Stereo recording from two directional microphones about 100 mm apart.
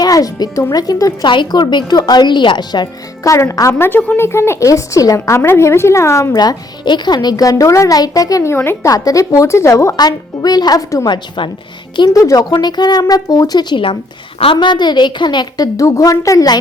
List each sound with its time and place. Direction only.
0.0 s speech: 40° left (ahead or behind)
1.3 s a woman's voice: 50° left (ahead or behind)
3.2 s a woman's voice: 30° left (ahead or behind); by 4.2 s 15° left (ahead or behind)
4.2 s a woman's voice: 25° left (ahead or behind)
6.3 s speech: 45° left (ahead or behind)
8.5 s a woman's voice: 20° left (ahead or behind)
8.9 s speech: 35° left (ahead or behind)
10.0 s speech: 40° left (ahead or behind)
11.1 s a woman's voice: 55° left (ahead or behind)
11.9 s a woman's voice: 40° left (ahead or behind)
14.3 s a woman's voice: 60° left (ahead or behind); by 16.6 s 35° left (ahead or behind)